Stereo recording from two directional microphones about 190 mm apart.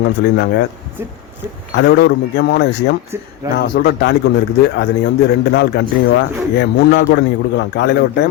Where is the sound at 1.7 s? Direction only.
65° left (ahead or behind).